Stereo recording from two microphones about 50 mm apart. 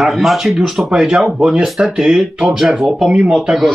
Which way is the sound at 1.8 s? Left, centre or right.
Right.